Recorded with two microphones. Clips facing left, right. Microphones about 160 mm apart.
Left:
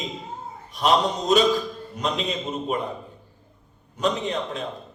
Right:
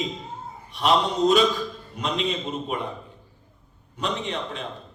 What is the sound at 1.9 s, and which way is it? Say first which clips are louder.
Speech: left 1 dB; 40° left (ahead or behind).